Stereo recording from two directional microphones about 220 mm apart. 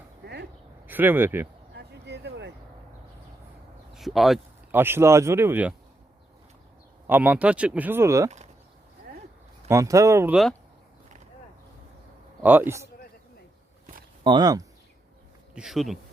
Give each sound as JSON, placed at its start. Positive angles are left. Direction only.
{"t": 0.2, "sound": "a sound", "side_deg": -50}
{"t": 0.9, "sound": "speech", "side_deg": -10}
{"t": 1.7, "sound": "a sound", "side_deg": -50}
{"t": 3.9, "sound": "speech", "side_deg": 0}
{"t": 7.1, "sound": "speech", "side_deg": -5}
{"t": 9.6, "sound": "speech", "side_deg": -15}
{"t": 12.4, "sound": "speech", "side_deg": -10}
{"t": 14.3, "sound": "speech", "side_deg": -20}
{"t": 15.5, "sound": "speech", "side_deg": 0}